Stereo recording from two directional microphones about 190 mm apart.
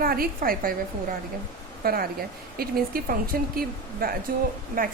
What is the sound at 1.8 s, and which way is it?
A woman's voice, 50° right (ahead or behind).